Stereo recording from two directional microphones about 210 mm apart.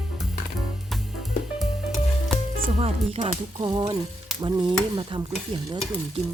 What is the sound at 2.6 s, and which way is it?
Speech, 30° right (ahead or behind).